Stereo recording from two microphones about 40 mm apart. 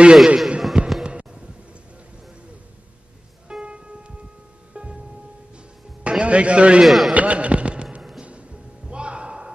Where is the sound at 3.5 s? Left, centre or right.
Right.